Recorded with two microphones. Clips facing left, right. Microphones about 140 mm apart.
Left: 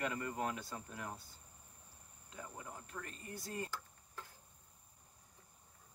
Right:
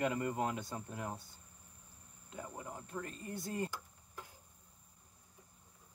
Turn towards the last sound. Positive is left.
turn(degrees=-15)  # may be behind; listen again after turning